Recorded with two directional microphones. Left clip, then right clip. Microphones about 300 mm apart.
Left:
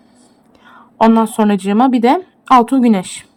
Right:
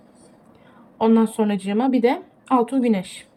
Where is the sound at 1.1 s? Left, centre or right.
Centre.